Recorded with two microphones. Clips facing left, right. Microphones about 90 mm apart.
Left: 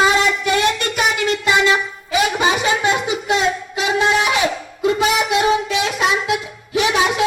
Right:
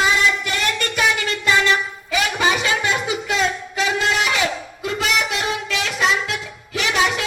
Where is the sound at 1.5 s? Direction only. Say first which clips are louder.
Left 2 dB; 20° left (ahead or behind).